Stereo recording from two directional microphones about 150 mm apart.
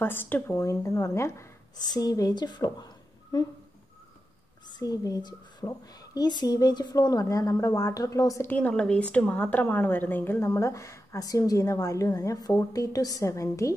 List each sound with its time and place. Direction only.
0.0 s a woman's voice: 15° left (ahead or behind)
4.6 s a woman's voice: 25° left (ahead or behind)
8.5 s a woman's voice: 10° left (ahead or behind)